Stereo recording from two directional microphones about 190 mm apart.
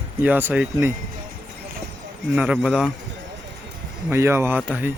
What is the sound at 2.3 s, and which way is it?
Speech, 5° right (ahead or behind).